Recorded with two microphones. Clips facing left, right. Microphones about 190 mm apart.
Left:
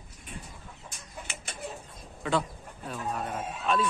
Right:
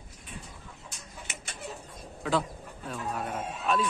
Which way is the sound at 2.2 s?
5° right (ahead or behind).